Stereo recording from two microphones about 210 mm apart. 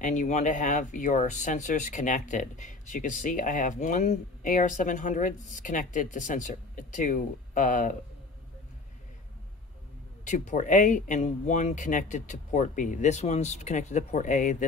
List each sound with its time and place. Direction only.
0.0 s speech: 35° left (ahead or behind)
10.2 s speech: 35° left (ahead or behind)